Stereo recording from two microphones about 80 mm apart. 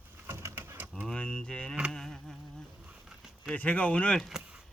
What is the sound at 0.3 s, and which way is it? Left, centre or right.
Bird, right.